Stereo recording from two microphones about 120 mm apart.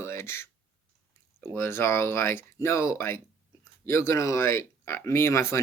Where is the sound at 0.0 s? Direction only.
20° left (ahead or behind).